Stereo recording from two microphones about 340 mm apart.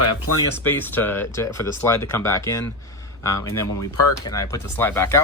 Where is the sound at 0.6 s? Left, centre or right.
Centre.